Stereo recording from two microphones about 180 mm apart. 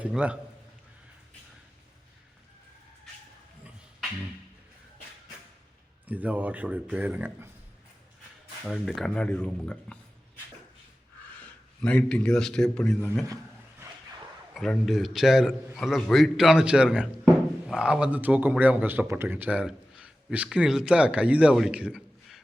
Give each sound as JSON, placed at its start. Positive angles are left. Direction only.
{"t": 0.0, "sound": "a man's voice", "side_deg": -5}
{"t": 6.1, "sound": "a man's voice", "side_deg": -10}
{"t": 8.6, "sound": "a man's voice", "side_deg": 0}
{"t": 11.3, "sound": "a man's voice", "side_deg": 5}
{"t": 13.2, "sound": "a sound", "side_deg": -20}
{"t": 14.5, "sound": "a man's voice", "side_deg": 0}